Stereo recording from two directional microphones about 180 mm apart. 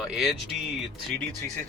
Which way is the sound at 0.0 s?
Centre (ahead or behind).